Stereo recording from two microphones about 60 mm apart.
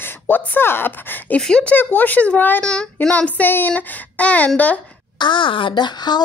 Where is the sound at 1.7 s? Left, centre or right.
Left.